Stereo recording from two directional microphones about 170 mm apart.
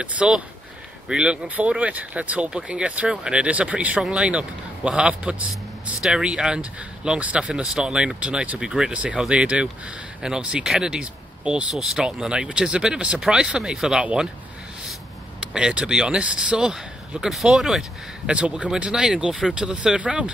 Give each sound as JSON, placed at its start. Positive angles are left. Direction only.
{"t": 0.0, "sound": "speech", "side_deg": -5}
{"t": 15.5, "sound": "speech", "side_deg": -5}